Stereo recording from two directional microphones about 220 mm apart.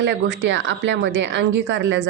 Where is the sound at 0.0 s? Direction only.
55° right (ahead or behind).